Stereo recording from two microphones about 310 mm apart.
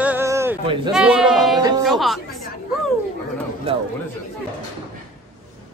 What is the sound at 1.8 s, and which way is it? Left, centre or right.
Speech, centre.